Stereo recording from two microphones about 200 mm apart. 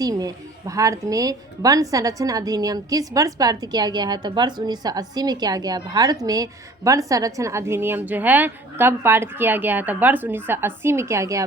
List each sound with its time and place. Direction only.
0.0 s a woman's voice: 20° right (ahead or behind)